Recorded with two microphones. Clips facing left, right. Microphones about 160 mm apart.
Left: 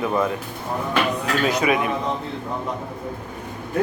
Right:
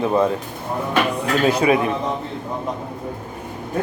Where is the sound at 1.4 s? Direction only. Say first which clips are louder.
Right 4 dB; 30° right (ahead or behind).